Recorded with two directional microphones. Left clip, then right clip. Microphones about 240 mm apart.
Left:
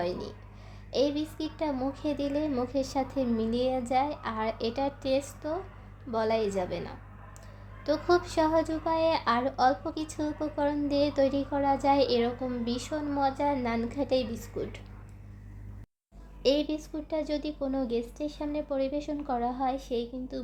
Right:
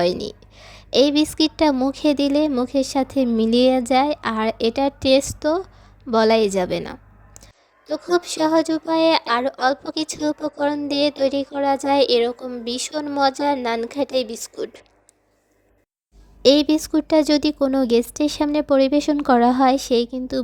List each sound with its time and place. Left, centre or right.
0.0 s speech: right
16.4 s speech: right